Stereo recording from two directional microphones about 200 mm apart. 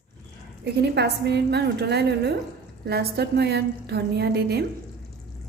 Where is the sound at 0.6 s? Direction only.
55° right (ahead or behind).